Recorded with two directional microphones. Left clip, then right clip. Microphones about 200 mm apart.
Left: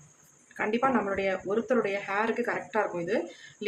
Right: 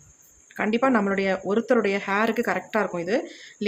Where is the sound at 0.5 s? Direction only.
45° right (ahead or behind).